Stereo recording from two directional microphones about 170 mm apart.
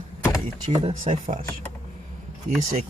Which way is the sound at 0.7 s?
40° right (ahead or behind).